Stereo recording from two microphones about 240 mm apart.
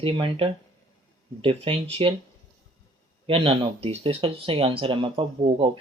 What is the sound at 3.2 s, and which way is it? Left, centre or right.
Speech, right.